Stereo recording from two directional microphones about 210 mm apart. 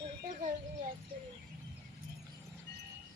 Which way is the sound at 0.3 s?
35° right (ahead or behind).